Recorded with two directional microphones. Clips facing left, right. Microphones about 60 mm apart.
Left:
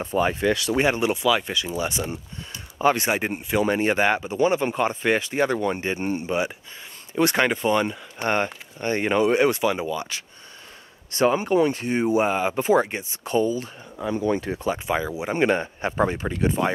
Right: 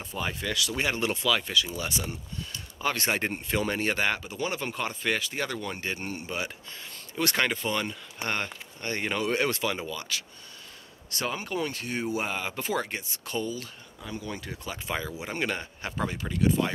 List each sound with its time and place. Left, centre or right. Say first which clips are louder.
0.0 s speech: left 11 dB; left
14.9 s speech: left 3 dB; centre